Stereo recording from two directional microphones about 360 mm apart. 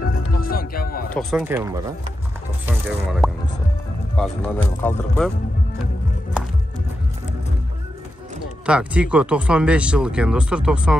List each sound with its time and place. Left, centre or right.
0.1 s music: left
1.1 s speech: centre
8.6 s speech: centre